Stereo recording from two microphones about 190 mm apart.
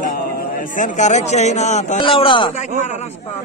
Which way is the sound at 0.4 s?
45° left (ahead or behind).